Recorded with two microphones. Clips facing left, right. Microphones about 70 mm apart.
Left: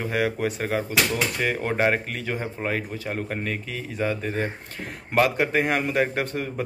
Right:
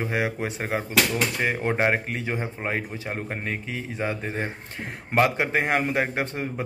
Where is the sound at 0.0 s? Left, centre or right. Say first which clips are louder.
Left 2 dB; right.